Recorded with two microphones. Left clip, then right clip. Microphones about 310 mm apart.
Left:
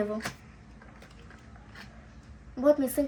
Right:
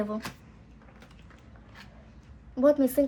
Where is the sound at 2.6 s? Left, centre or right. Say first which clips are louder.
Right 2 dB; right.